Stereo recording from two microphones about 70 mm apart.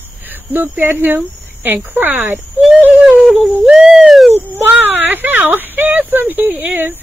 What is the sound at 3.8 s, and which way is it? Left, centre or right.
Owl, centre.